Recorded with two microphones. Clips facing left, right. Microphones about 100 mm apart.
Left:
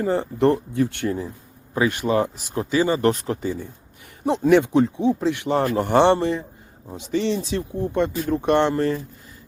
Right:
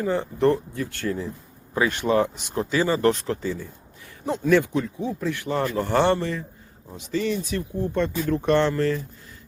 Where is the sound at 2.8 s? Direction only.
20° left (ahead or behind).